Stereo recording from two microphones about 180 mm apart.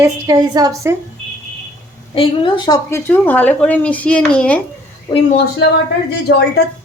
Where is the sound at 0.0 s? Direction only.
20° right (ahead or behind).